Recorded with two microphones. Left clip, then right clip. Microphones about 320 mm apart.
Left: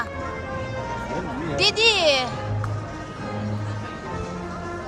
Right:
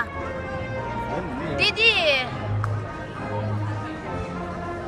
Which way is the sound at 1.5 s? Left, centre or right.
Centre.